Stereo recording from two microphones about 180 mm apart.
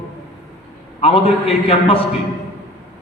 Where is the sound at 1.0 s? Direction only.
30° left (ahead or behind).